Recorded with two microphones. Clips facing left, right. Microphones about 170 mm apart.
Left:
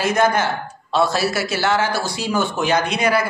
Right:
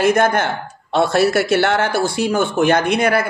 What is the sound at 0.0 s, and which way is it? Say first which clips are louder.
A man's voice: right 3 dB; 55° right (ahead or behind).